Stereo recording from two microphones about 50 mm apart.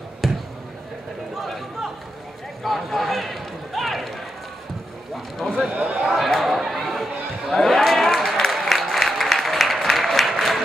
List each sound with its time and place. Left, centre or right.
0.2 s basketball bounce: centre
1.4 s a sound: centre
2.6 s run: centre
5.7 s a man's voice: right
5.9 s chatter: centre